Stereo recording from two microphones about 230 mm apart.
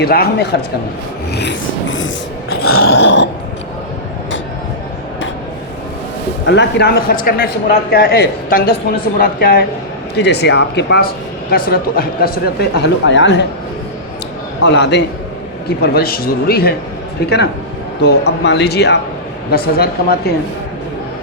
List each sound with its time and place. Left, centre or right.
0.0 s speech: left
2.6 s growling: left
2.9 s speech: left
6.4 s a man's voice: left
14.6 s a man's voice: left